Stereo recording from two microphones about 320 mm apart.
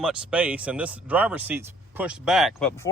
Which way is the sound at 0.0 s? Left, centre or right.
Centre.